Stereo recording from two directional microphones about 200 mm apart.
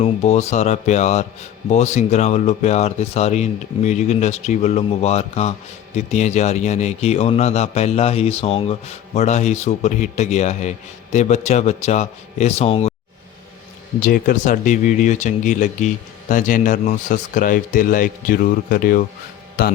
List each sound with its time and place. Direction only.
0.0 s a man's voice: 35° left (ahead or behind)
14.0 s a man's voice: 45° left (ahead or behind)